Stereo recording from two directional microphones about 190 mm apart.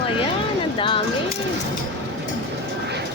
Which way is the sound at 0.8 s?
25° left (ahead or behind).